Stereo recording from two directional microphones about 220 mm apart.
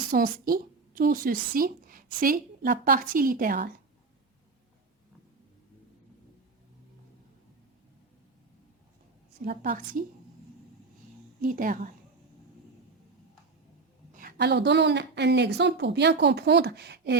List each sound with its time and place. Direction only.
0.1 s a woman's voice: 40° right (ahead or behind)
9.4 s a woman's voice: 40° right (ahead or behind)
11.3 s a woman's voice: 40° right (ahead or behind)
14.1 s a woman's voice: 40° right (ahead or behind)